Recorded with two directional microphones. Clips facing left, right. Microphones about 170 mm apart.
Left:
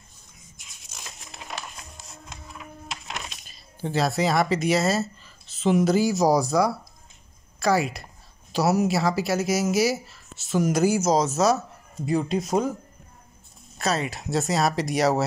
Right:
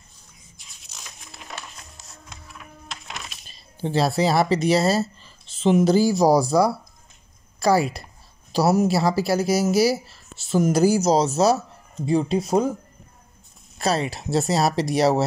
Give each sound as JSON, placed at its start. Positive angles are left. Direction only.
{"t": 3.4, "sound": "speech", "side_deg": -30}
{"t": 13.7, "sound": "speech", "side_deg": -35}